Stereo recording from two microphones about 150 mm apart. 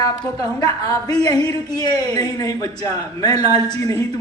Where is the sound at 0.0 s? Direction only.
25° left (ahead or behind).